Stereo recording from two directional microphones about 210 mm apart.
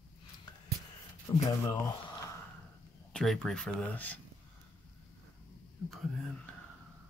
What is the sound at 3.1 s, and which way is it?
Speech, centre (ahead or behind).